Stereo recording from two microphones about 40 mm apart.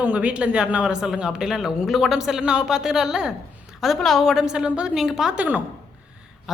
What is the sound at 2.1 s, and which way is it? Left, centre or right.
Speech, centre.